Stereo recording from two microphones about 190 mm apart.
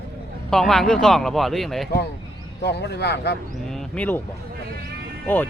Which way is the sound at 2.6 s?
60° left (ahead or behind).